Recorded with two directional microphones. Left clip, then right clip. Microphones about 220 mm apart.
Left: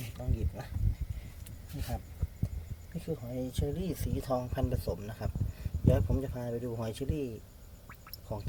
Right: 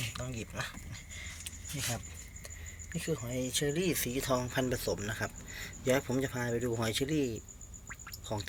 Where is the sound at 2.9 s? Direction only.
5° left (ahead or behind).